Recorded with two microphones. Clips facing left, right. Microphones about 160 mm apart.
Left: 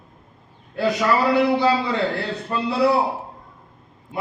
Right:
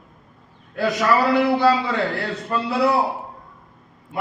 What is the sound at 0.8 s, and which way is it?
Speech, 20° left (ahead or behind).